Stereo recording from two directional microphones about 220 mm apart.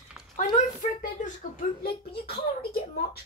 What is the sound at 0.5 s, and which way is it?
A child's voice, 35° left (ahead or behind).